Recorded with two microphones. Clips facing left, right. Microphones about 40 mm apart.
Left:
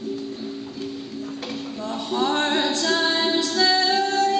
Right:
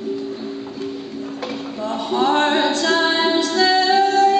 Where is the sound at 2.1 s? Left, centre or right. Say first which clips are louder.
Right 5 dB; centre.